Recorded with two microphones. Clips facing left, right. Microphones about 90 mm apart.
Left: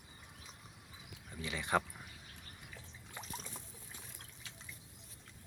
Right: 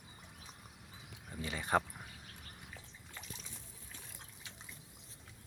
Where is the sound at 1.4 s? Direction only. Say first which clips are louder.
Right 1 dB; 35° right (ahead or behind).